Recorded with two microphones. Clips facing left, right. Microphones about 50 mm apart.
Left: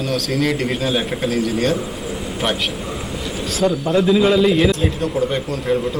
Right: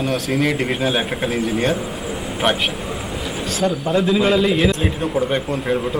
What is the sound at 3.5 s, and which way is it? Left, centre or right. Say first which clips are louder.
A man's voice: left 2 dB; centre.